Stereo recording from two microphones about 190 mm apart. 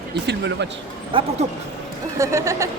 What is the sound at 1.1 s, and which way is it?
Speech, 25° right (ahead or behind).